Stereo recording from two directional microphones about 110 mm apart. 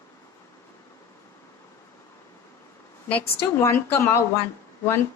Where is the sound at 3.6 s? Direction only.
25° left (ahead or behind).